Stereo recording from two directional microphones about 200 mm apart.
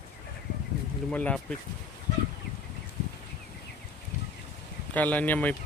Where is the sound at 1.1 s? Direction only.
5° left (ahead or behind).